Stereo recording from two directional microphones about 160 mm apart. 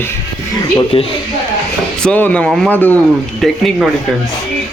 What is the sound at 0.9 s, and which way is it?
Speech, 35° left (ahead or behind).